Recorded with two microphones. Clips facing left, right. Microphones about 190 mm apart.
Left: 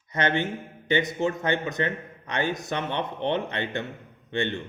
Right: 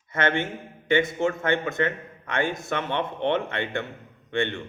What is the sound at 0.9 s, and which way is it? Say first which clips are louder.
A man's voice: right 2 dB; 20° left (ahead or behind).